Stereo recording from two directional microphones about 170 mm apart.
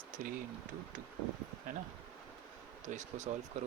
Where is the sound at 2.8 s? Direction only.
45° right (ahead or behind).